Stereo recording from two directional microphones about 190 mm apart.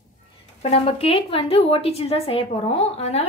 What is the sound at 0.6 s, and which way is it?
A woman's voice, 30° left (ahead or behind).